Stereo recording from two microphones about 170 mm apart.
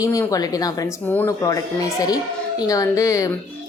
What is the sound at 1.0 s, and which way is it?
A woman's voice, 10° left (ahead or behind).